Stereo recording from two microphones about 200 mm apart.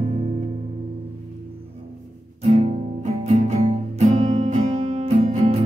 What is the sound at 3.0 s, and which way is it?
Music, 35° right (ahead or behind).